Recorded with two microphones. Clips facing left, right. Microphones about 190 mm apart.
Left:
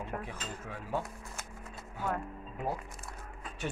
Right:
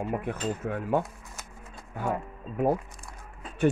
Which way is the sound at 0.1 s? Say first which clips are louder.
Right 10 dB; 60° right (ahead or behind).